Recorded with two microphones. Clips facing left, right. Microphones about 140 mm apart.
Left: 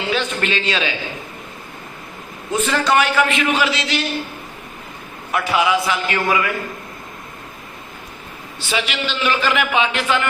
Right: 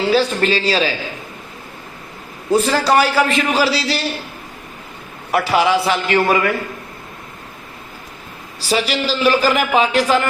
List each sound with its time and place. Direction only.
0.1 s a man's voice: 35° right (ahead or behind)
2.5 s a man's voice: 35° right (ahead or behind)
5.3 s a man's voice: 35° right (ahead or behind)
8.5 s a man's voice: 35° right (ahead or behind)